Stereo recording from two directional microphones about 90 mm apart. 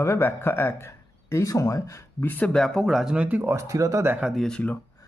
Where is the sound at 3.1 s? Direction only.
15° right (ahead or behind).